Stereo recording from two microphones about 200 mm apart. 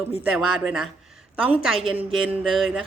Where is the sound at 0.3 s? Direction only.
5° right (ahead or behind).